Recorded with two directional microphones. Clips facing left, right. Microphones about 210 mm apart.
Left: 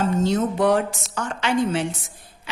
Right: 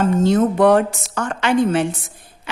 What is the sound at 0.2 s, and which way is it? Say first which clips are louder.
A woman's voice: right 6 dB; 55° right (ahead or behind).